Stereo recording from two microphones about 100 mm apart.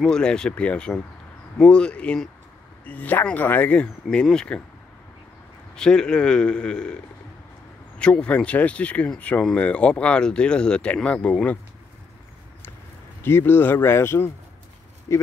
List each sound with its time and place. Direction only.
0.0 s speech: 10° left (ahead or behind)
5.8 s speech: 10° left (ahead or behind)
8.0 s speech: 10° left (ahead or behind)
13.2 s speech: 20° left (ahead or behind)